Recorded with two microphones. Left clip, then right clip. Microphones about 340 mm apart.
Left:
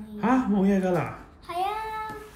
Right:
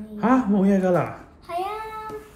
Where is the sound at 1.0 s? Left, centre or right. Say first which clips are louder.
Right 5 dB; centre.